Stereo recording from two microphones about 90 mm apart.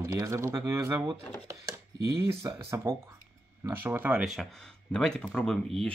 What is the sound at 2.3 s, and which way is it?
Speech, 30° right (ahead or behind).